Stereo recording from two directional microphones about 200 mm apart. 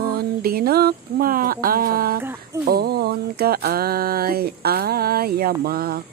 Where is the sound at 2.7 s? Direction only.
50° right (ahead or behind).